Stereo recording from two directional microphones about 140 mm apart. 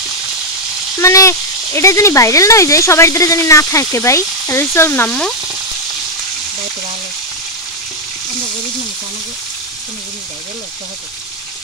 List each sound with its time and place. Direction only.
0.9 s speech: 20° left (ahead or behind)